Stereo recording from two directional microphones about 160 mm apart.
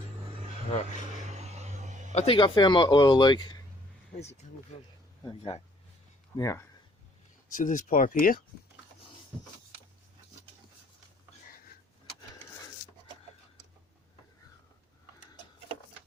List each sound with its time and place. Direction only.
1.3 s a sound: 45° right (ahead or behind)
2.1 s a man's voice: 35° left (ahead or behind)
4.2 s speech: 45° left (ahead or behind)
6.3 s speech: 20° left (ahead or behind)
7.5 s speech: 55° left (ahead or behind)